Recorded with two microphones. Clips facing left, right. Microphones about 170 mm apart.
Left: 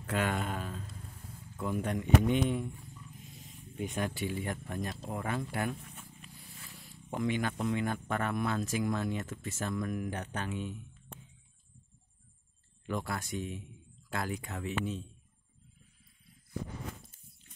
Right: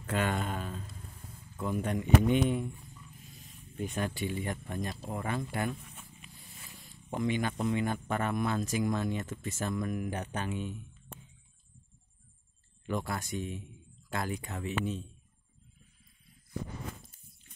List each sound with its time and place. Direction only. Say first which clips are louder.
0.1 s speech: right 1 dB; 5° left (ahead or behind)
3.3 s a sound: even; 20° left (ahead or behind)
3.9 s speech: right 1 dB; 10° left (ahead or behind)
7.1 s speech: right 1 dB; centre (ahead or behind)
12.8 s speech: right 1 dB; centre (ahead or behind)